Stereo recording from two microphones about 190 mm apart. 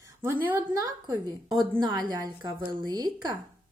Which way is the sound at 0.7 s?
20° right (ahead or behind).